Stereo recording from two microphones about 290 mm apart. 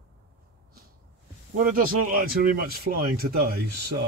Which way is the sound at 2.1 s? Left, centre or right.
Right.